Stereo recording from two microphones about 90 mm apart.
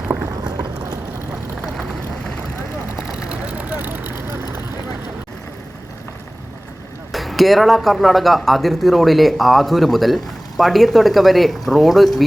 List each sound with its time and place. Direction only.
0.4 s boat: 50° right (ahead or behind)
1.6 s vehicle: centre (ahead or behind)
3.2 s vehicle: 15° right (ahead or behind)
7.1 s speech: centre (ahead or behind)